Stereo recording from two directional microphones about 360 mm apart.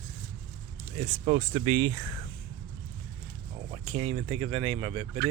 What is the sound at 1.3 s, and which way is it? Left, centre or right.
Speech, centre.